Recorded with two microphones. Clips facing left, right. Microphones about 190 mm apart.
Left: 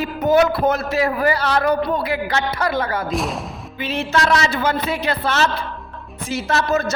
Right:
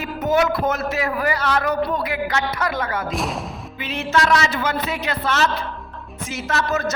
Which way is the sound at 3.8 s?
30° left (ahead or behind).